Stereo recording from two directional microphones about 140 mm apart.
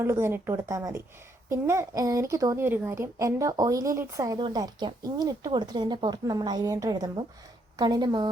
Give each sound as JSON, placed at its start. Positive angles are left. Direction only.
{"t": 0.0, "sound": "a woman's voice", "side_deg": -20}